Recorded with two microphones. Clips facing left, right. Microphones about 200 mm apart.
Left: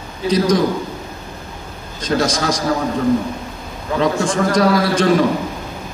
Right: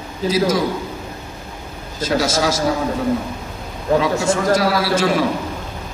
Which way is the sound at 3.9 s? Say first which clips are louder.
Right 2 dB; 40° right (ahead or behind).